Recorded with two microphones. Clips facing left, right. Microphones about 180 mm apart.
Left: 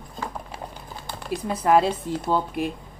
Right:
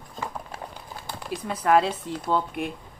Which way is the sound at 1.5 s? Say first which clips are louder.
Left 2 dB; 10° left (ahead or behind).